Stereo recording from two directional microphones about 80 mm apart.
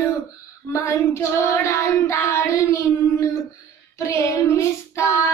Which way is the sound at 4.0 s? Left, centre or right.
Left.